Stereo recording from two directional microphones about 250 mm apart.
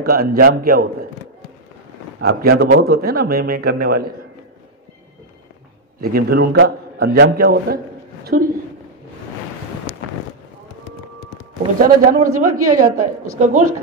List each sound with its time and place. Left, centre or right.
0.0 s speech: right
2.2 s speech: right
5.9 s a man's voice: right
11.8 s speech: right
12.4 s a woman's voice: right
13.4 s speech: right